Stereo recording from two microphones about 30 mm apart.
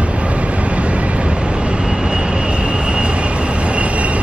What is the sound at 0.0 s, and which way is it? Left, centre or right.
Vehicle, right.